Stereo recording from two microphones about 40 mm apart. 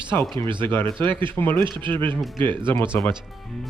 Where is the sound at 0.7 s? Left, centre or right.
Left.